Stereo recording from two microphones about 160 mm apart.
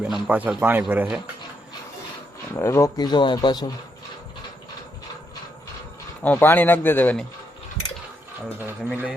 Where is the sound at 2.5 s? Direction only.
15° left (ahead or behind).